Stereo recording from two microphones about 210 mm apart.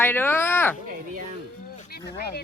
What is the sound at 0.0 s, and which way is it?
Speech, 10° left (ahead or behind).